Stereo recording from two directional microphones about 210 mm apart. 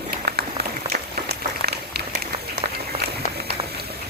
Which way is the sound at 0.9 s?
50° right (ahead or behind).